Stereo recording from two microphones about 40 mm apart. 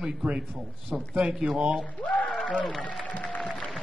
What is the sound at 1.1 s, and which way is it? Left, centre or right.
Speech, right.